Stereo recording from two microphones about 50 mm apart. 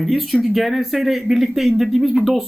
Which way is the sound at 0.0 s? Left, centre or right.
Centre.